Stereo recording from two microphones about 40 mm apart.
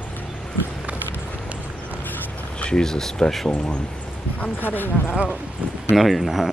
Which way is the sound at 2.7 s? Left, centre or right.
Centre.